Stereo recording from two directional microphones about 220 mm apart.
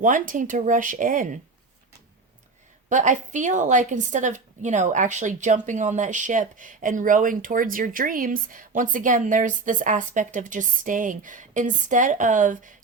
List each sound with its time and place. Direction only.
0.0 s a woman's voice: 35° right (ahead or behind)
2.9 s a woman's voice: 35° right (ahead or behind)